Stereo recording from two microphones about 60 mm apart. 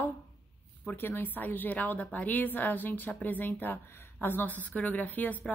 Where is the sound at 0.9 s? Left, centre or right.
Left.